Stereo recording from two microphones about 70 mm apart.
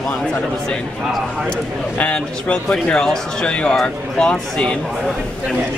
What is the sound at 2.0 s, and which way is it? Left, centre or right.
Speech, centre.